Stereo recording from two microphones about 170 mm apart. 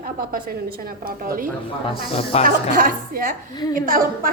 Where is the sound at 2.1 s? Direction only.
35° left (ahead or behind).